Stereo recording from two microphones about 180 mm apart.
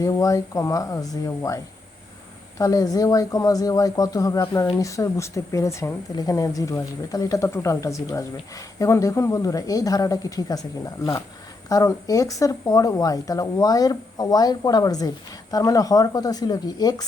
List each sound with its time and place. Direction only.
0.0 s speech: 20° left (ahead or behind)